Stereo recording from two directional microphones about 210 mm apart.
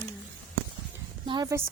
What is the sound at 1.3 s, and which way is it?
Speech, 20° right (ahead or behind).